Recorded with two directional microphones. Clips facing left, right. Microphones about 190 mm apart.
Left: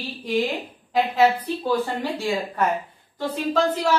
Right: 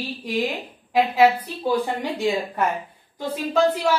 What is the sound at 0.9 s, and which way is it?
Speech, 10° right (ahead or behind).